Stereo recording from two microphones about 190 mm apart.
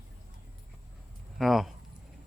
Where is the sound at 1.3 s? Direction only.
Centre (ahead or behind).